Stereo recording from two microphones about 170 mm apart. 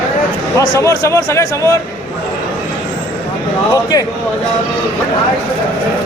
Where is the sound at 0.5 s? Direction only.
20° left (ahead or behind).